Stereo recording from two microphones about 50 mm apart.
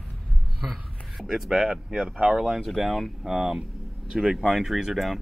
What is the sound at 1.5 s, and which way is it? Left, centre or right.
Speech, centre.